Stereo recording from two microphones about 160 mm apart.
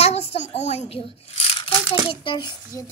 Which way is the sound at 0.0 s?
40° left (ahead or behind).